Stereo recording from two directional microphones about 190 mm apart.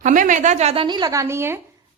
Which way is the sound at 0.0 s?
40° right (ahead or behind).